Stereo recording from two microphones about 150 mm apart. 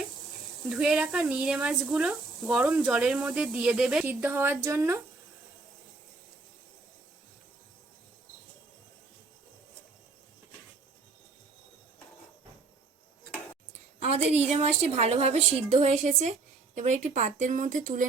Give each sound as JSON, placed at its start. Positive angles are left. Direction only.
{"t": 0.7, "sound": "speech", "side_deg": -5}
{"t": 14.0, "sound": "a sound", "side_deg": -45}
{"t": 14.4, "sound": "a woman's voice", "side_deg": -45}